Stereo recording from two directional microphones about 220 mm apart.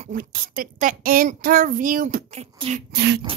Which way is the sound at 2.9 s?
50° right (ahead or behind).